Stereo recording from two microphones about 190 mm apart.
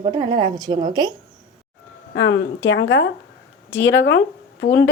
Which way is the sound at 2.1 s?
70° left (ahead or behind).